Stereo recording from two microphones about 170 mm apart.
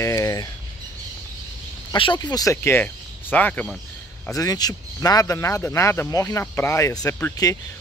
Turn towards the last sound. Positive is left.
turn(degrees=15)  # may be behind; listen again after turning